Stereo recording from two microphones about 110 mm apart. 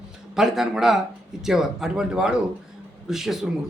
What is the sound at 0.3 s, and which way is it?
A man's voice, centre (ahead or behind).